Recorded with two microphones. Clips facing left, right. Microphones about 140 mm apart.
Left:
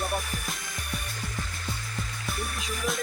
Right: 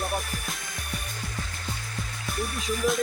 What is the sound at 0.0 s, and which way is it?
Music, centre (ahead or behind).